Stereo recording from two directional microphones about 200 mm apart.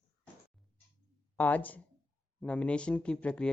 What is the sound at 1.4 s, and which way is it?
A woman's voice, 10° left (ahead or behind).